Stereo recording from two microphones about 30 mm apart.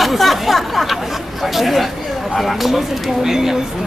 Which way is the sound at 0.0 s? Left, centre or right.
Centre.